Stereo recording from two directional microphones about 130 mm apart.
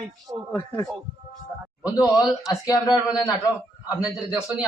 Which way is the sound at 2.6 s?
30° left (ahead or behind).